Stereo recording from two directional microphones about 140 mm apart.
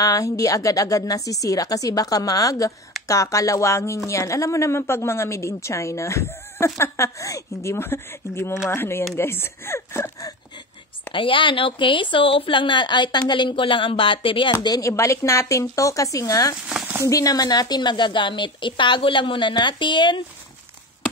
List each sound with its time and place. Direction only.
0.0 s a woman's voice: 25° left (ahead or behind)
11.1 s a woman's voice: 40° left (ahead or behind)
16.6 s speech: 10° right (ahead or behind)
17.0 s a woman's voice: 25° left (ahead or behind)